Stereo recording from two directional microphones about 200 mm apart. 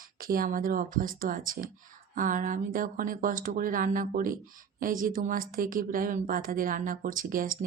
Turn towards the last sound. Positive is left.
turn(degrees=-45)  # may be behind; listen again after turning